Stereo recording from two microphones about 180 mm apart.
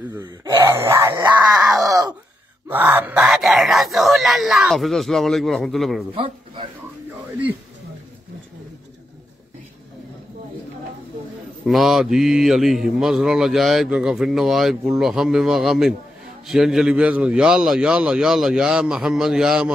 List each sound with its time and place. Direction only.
0.7 s dog: 15° right (ahead or behind)
1.9 s groan: 20° right (ahead or behind)
2.7 s speech: 10° right (ahead or behind)
6.1 s speech: 30° right (ahead or behind)
11.6 s speech: centre (ahead or behind)